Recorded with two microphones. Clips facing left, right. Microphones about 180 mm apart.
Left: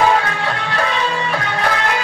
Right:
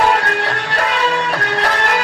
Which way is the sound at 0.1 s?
65° right (ahead or behind).